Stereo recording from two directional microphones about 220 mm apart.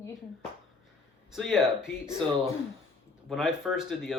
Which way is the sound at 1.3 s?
Centre (ahead or behind).